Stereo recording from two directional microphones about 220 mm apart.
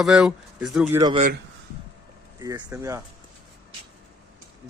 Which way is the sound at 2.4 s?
15° right (ahead or behind).